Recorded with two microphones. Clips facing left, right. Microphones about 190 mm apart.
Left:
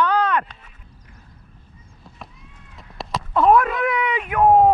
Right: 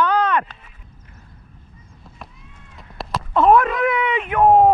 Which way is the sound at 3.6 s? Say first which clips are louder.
Right 3 dB; centre (ahead or behind).